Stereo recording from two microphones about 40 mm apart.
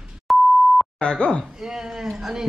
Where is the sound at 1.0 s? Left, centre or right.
Left.